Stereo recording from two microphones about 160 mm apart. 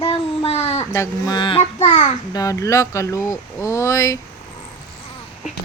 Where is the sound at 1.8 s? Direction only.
45° left (ahead or behind).